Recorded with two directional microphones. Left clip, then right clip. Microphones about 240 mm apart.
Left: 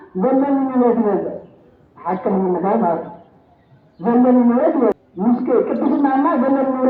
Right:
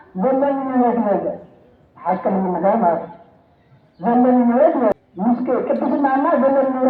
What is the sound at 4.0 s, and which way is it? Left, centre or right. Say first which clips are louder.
A woman's voice: left 1 dB; right.